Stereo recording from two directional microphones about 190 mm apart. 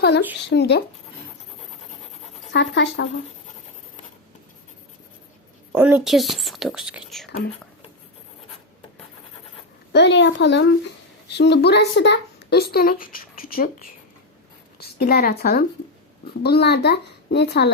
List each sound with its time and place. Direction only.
0.5 s speech: 60° left (ahead or behind)
2.5 s speech: 65° left (ahead or behind)
5.7 s speech: 10° right (ahead or behind)
9.9 s speech: 65° left (ahead or behind)